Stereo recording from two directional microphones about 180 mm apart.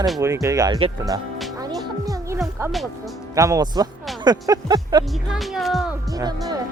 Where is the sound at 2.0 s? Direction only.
20° right (ahead or behind).